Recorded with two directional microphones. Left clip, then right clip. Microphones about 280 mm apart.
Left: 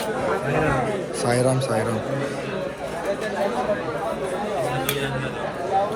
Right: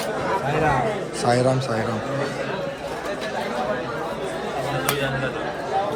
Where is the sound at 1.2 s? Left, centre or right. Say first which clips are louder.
Right 2 dB; centre.